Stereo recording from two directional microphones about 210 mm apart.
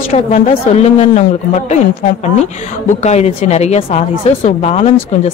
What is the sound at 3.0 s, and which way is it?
Speech, 30° left (ahead or behind).